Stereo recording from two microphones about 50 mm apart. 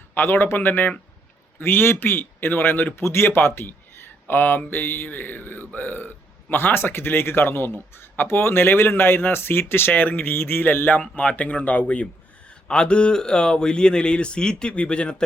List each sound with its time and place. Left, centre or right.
0.1 s a man's voice: left